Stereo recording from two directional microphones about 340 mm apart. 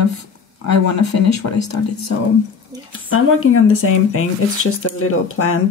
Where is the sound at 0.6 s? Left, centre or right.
Left.